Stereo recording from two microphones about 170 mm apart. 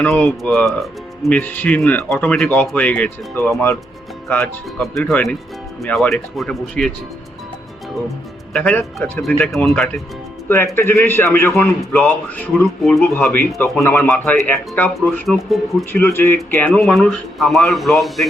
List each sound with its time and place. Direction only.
0.0 s speech: 10° left (ahead or behind)
8.5 s speech: 5° left (ahead or behind)
10.8 s speech: 15° left (ahead or behind)
15.9 s speech: 15° left (ahead or behind)